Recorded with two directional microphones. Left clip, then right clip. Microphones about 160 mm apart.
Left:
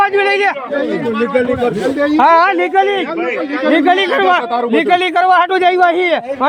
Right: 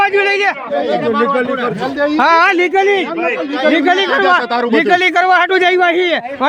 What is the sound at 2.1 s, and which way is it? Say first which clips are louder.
Speech: left 1 dB; 30° right (ahead or behind).